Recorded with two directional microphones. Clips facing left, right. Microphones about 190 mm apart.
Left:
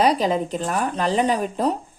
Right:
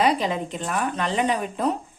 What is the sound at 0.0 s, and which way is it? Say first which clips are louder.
A woman's voice: left 3 dB; 40° left (ahead or behind).